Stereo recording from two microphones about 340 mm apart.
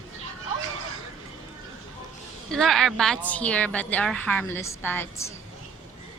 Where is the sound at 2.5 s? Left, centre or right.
Centre.